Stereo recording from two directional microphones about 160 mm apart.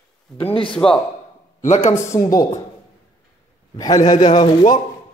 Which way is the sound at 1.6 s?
50° left (ahead or behind).